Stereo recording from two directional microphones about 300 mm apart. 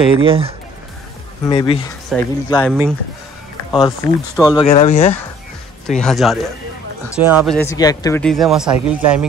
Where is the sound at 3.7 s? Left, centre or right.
Centre.